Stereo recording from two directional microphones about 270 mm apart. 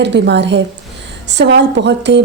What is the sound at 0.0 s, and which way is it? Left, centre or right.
A woman's voice, right.